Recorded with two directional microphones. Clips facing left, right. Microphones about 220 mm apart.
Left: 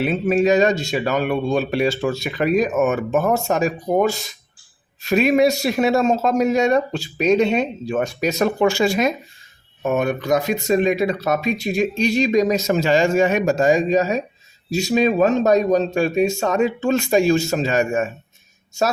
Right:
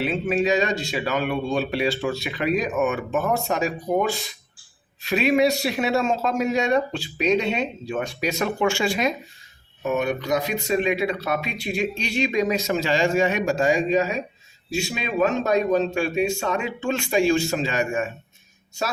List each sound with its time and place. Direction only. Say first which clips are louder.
0.0 s speech: left 5 dB; 45° left (ahead or behind)